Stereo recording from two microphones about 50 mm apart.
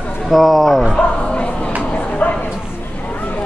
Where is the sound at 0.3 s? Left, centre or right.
Centre.